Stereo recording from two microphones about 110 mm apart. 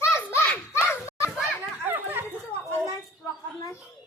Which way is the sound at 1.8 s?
20° right (ahead or behind).